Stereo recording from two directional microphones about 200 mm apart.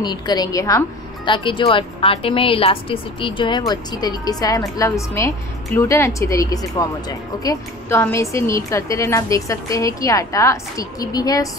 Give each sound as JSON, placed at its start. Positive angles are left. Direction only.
{"t": 0.0, "sound": "a woman's voice", "side_deg": 20}